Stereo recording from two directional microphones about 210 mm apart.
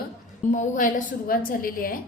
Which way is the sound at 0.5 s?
40° left (ahead or behind).